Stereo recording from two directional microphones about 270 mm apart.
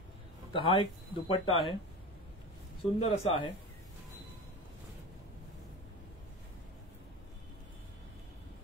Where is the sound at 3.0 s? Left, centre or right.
Left.